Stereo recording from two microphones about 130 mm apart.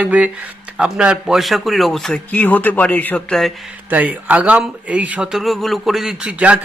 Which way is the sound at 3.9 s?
10° right (ahead or behind).